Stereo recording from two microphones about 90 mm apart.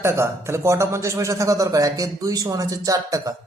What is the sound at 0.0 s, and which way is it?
A man's voice, 30° right (ahead or behind).